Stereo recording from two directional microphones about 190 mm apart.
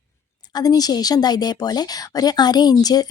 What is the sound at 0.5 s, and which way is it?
A woman's voice, 20° left (ahead or behind).